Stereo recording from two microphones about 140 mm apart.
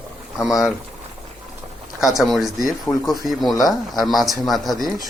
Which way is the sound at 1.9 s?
Centre (ahead or behind).